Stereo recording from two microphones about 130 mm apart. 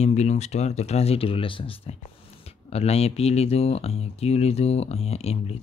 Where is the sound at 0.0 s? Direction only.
55° left (ahead or behind).